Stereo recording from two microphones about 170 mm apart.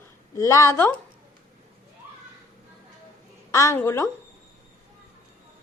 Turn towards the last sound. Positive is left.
turn(degrees=15)  # may be behind; listen again after turning